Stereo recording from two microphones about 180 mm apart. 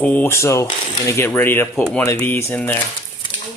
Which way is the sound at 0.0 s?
10° left (ahead or behind).